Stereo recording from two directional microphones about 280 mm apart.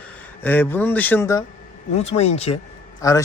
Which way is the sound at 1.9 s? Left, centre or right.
Left.